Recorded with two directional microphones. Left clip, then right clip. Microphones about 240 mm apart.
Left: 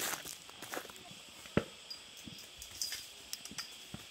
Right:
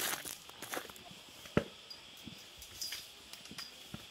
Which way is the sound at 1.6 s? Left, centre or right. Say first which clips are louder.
Right 1 dB; right.